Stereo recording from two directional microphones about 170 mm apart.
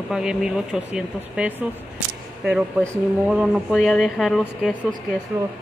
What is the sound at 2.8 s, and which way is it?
Speech, centre (ahead or behind).